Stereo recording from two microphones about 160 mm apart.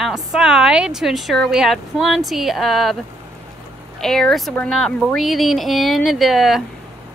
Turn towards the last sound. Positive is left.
turn(degrees=0)  # may be behind; listen again after turning